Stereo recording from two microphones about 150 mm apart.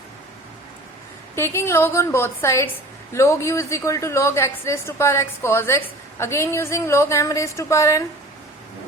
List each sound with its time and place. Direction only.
1.4 s a woman's voice: 15° left (ahead or behind)